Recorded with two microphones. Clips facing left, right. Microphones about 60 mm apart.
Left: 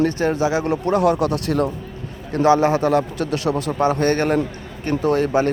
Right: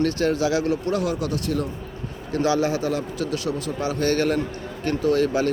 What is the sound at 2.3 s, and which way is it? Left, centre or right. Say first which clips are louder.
A man's voice: left 6 dB; left.